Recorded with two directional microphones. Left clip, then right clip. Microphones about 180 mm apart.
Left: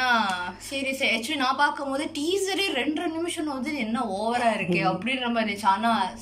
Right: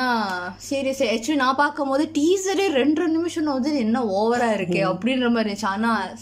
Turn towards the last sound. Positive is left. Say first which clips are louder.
# left 1 dB
turn(degrees=-55)  # may be behind; listen again after turning